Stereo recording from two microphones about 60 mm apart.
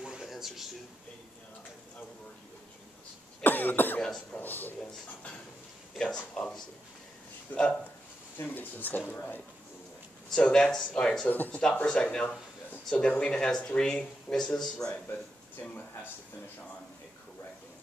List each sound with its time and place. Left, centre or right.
0.0 s a sound: centre
3.4 s cough: left
4.3 s speech: left
6.1 s speech: left
7.5 s speech: centre
8.4 s speech: left
10.3 s speech: centre
11.2 s speech: left
11.8 s speech: centre